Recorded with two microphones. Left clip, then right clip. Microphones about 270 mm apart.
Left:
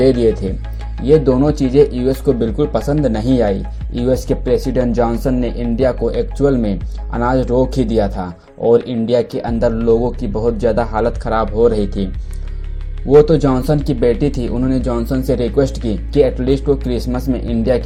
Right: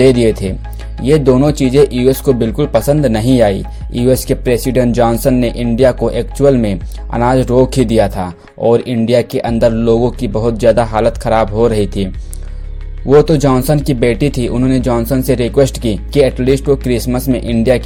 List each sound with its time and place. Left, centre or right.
0.0 s speech: right
13.1 s speech: right